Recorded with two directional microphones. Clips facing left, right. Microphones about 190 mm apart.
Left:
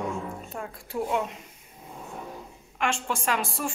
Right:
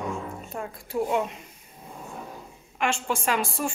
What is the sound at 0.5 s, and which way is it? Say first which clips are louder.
Speech: right 4 dB; 15° right (ahead or behind).